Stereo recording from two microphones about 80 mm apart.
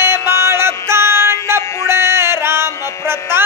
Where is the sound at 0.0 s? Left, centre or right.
Right.